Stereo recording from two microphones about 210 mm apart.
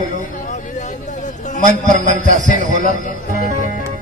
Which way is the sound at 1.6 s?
35° right (ahead or behind).